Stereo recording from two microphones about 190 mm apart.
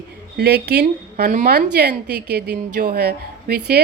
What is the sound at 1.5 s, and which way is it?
A woman's voice, 60° right (ahead or behind).